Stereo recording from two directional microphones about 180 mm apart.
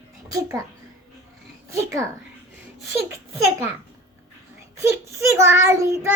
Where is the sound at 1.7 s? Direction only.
15° right (ahead or behind).